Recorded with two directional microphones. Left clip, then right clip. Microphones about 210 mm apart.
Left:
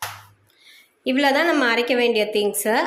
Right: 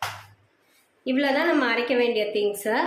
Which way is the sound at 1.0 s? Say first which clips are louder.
Left 4 dB; 30° left (ahead or behind).